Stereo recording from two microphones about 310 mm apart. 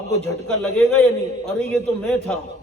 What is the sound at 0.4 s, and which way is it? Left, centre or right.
A man's voice, centre.